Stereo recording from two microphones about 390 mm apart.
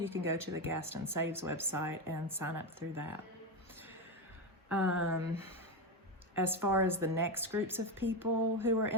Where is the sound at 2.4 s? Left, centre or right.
Right.